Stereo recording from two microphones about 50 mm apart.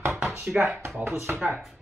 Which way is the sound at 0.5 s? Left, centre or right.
Centre.